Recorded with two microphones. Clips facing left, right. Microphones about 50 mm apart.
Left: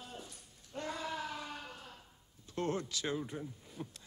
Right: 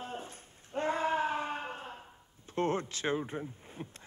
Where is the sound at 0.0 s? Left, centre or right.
Right.